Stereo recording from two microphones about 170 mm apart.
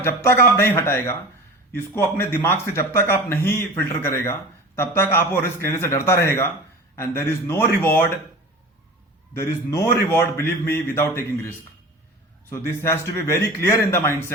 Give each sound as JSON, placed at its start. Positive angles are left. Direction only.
{"t": 0.0, "sound": "speech", "side_deg": 15}
{"t": 9.3, "sound": "speech", "side_deg": 15}
{"t": 12.5, "sound": "speech", "side_deg": 15}